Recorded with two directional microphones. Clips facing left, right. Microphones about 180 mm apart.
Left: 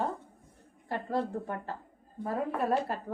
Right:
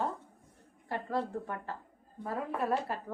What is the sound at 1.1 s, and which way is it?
Speech, 35° left (ahead or behind).